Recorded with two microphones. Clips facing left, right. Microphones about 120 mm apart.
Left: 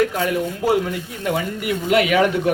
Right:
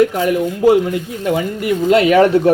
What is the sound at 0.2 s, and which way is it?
Speech, 20° right (ahead or behind).